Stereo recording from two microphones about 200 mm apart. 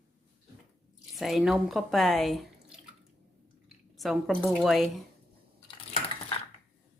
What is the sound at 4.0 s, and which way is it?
A woman's voice, centre (ahead or behind).